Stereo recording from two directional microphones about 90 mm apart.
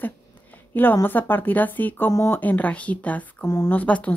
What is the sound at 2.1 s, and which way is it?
Speech, 30° left (ahead or behind).